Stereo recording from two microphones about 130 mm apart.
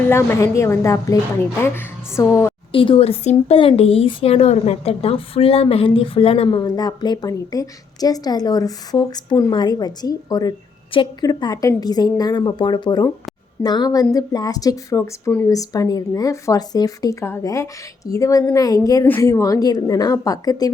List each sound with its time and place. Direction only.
0.1 s a woman's voice: 20° left (ahead or behind)
2.7 s a woman's voice: 45° left (ahead or behind)